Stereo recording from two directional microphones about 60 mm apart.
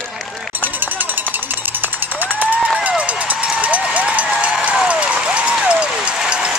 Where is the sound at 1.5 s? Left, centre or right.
Right.